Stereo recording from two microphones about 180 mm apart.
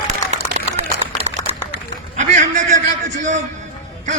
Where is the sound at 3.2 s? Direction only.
40° right (ahead or behind).